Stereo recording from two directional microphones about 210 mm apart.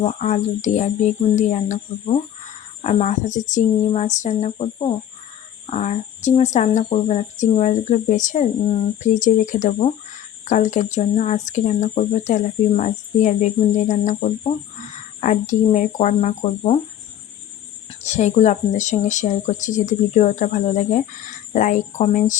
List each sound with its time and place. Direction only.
0.0 s speech: 35° left (ahead or behind)
18.0 s speech: 35° left (ahead or behind)